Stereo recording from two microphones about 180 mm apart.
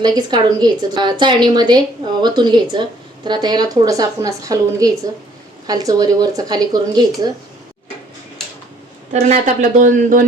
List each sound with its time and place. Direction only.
0.0 s a woman's voice: 25° right (ahead or behind)
9.2 s speech: 45° right (ahead or behind)